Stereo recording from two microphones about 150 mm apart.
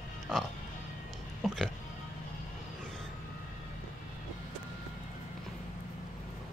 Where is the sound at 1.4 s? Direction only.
Centre (ahead or behind).